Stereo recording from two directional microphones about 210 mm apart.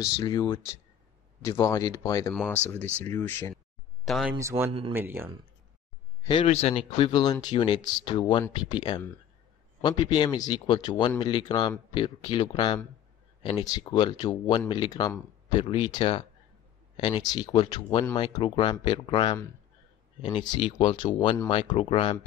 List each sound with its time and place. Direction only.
0.0 s speech: 20° left (ahead or behind)
2.3 s speech: centre (ahead or behind)
4.0 s speech: centre (ahead or behind)
4.4 s speech: 15° right (ahead or behind)
6.2 s speech: 25° left (ahead or behind)